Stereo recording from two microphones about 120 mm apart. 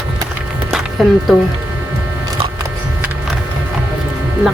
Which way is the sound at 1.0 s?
Centre (ahead or behind).